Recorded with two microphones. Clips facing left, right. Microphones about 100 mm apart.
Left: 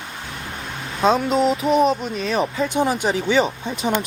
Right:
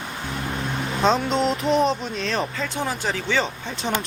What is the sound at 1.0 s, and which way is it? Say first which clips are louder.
Speech: left 3 dB; 5° left (ahead or behind).